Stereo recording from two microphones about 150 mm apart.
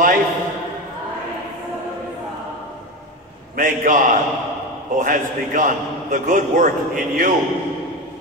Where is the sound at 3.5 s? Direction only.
60° right (ahead or behind).